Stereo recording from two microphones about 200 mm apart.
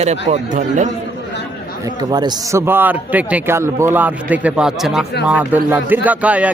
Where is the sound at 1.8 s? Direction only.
20° right (ahead or behind).